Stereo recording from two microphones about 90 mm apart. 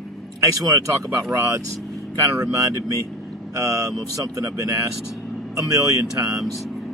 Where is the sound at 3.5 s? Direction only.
35° right (ahead or behind).